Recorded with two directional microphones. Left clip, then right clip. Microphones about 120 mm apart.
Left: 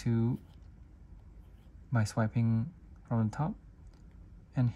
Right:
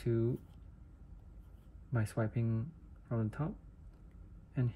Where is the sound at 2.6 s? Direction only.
50° left (ahead or behind).